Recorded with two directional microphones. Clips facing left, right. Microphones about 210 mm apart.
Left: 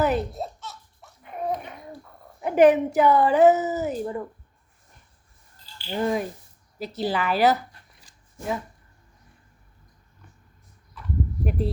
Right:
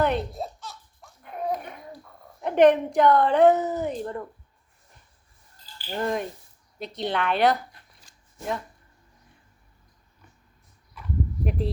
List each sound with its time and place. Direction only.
0.0 s baby laughter: 5° left (ahead or behind)
2.4 s a woman's voice: 5° left (ahead or behind)
5.9 s a woman's voice: 5° left (ahead or behind)
11.4 s a woman's voice: centre (ahead or behind)